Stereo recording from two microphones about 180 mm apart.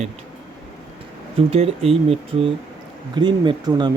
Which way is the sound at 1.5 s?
35° right (ahead or behind).